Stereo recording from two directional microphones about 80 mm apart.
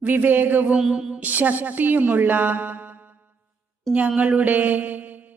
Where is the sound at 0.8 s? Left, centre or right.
Centre.